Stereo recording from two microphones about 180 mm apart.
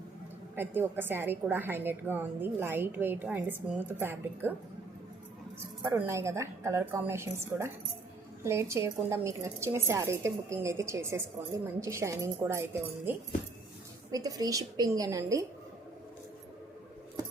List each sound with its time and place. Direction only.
0.5 s a woman's voice: 10° right (ahead or behind)
5.8 s a woman's voice: 15° right (ahead or behind)
14.1 s a woman's voice: 20° right (ahead or behind)